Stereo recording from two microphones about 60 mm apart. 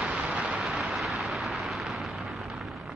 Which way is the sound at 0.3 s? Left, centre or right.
Centre.